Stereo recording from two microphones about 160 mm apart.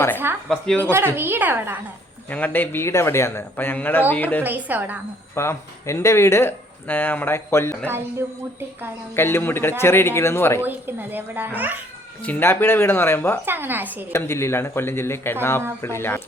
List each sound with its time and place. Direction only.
0.4 s speech: 5° left (ahead or behind)
0.8 s a child's voice: 15° right (ahead or behind)
2.3 s speech: 10° left (ahead or behind)
4.4 s a child's voice: 10° right (ahead or behind)
5.3 s speech: 15° left (ahead or behind)
9.1 s speech: 15° left (ahead or behind)
10.7 s a child's voice: 10° right (ahead or behind)
12.2 s speech: 10° left (ahead or behind)
13.4 s a child's voice: 15° right (ahead or behind)
14.1 s speech: 15° left (ahead or behind)